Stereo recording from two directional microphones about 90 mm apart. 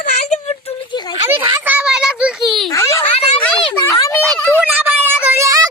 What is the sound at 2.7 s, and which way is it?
A child's voice, 35° left (ahead or behind).